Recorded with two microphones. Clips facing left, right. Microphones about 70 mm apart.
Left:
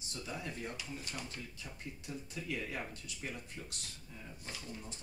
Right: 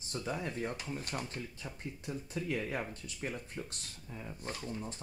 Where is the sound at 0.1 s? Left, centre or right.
Right.